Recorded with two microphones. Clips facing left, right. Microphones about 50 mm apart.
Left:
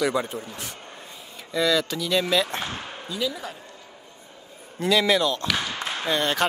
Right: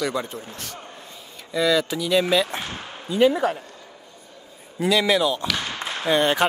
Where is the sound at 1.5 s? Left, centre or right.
Centre.